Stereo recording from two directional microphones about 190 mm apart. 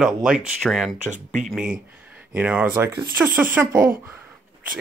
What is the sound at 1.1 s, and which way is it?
Speech, 40° right (ahead or behind).